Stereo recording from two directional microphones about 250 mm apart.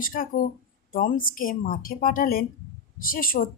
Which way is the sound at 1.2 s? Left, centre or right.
Left.